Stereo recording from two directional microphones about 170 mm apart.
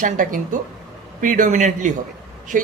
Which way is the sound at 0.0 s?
55° right (ahead or behind).